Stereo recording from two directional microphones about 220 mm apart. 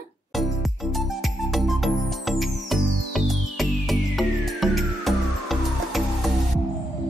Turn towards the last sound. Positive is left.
turn(degrees=0)  # may be behind; listen again after turning